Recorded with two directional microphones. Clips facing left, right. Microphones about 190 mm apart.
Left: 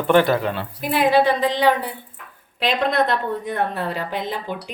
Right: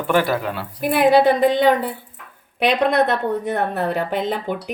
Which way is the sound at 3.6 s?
50° right (ahead or behind).